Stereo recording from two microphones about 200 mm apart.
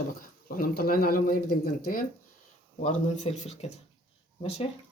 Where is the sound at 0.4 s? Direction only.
50° left (ahead or behind).